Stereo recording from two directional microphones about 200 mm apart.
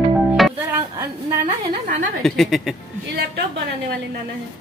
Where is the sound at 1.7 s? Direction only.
40° right (ahead or behind).